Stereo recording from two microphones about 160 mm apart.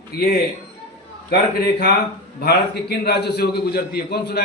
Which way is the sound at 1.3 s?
80° left.